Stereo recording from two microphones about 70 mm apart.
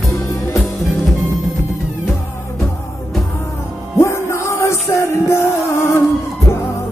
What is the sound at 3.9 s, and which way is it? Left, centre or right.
Music, left.